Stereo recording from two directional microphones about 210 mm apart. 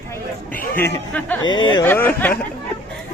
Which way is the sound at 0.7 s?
10° left (ahead or behind).